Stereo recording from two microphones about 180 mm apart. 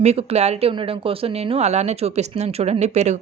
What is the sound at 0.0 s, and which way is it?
Speech, 35° right (ahead or behind).